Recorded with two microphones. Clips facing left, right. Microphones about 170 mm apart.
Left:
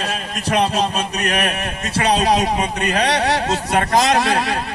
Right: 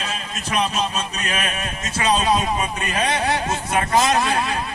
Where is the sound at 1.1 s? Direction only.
70° left (ahead or behind).